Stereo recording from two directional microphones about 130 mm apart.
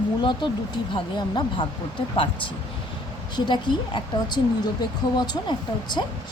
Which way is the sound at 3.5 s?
35° left (ahead or behind).